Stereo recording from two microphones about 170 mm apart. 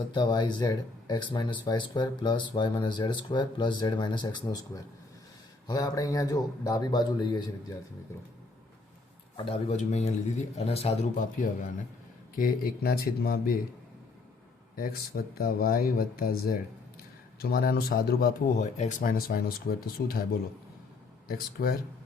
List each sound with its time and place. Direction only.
0.1 s speech: 25° left (ahead or behind)
9.4 s a man's voice: 35° left (ahead or behind)
12.4 s speech: 60° left (ahead or behind)
14.8 s speech: 60° left (ahead or behind)
21.2 s speech: 60° left (ahead or behind)